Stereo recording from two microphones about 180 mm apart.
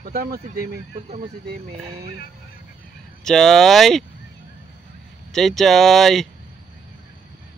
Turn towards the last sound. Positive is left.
turn(degrees=0)  # may be behind; listen again after turning